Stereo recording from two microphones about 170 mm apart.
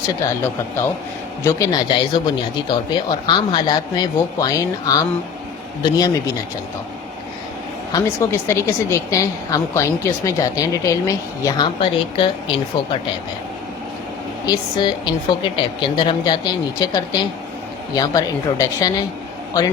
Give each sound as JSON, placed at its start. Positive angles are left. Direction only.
{"t": 1.5, "sound": "speech", "side_deg": 20}
{"t": 7.9, "sound": "a woman's voice", "side_deg": 15}
{"t": 14.4, "sound": "speech", "side_deg": 25}